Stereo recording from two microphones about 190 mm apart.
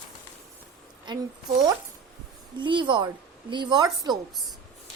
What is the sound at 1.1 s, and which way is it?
Speech, 25° right (ahead or behind).